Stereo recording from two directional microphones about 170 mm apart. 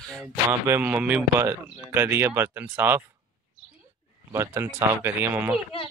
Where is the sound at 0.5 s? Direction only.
15° right (ahead or behind).